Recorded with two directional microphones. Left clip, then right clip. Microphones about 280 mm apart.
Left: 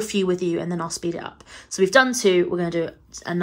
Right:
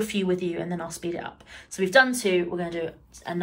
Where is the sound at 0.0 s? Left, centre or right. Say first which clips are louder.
Left 4 dB; centre.